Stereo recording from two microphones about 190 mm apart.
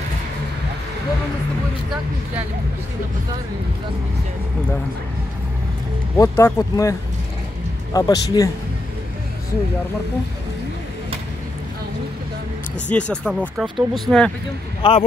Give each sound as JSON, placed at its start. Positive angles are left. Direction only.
{"t": 6.1, "sound": "speech", "side_deg": 15}
{"t": 12.9, "sound": "speech", "side_deg": 5}
{"t": 14.8, "sound": "speech", "side_deg": 25}